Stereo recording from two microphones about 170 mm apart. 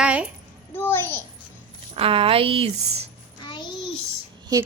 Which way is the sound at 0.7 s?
10° left (ahead or behind).